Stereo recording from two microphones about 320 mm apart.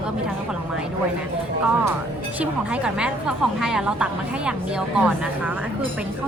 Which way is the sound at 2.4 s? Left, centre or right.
Centre.